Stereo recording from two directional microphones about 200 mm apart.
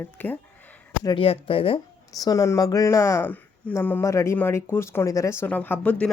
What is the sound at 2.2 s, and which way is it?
Speech, 15° left (ahead or behind).